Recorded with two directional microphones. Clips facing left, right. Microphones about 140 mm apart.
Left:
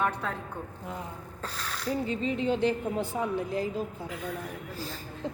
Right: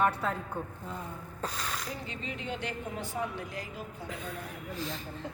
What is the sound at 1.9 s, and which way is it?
Speech, 35° left (ahead or behind).